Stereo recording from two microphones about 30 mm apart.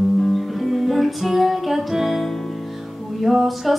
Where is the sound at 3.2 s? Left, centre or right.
Centre.